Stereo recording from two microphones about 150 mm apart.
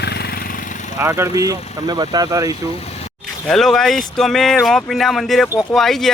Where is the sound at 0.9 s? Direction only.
20° right (ahead or behind).